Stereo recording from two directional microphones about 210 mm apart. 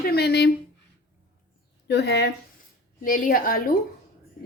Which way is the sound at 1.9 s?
50° left (ahead or behind).